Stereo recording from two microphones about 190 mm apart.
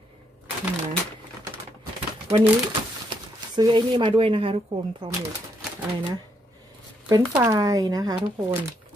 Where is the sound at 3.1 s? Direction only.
25° right (ahead or behind).